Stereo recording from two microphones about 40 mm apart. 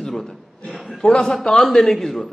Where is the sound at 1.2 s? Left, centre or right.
Centre.